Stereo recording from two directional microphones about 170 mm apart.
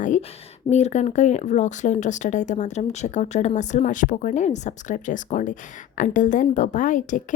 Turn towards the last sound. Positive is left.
turn(degrees=50)  # may be behind; listen again after turning